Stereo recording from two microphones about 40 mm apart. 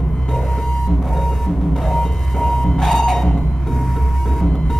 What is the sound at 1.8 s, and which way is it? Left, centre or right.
Music, centre.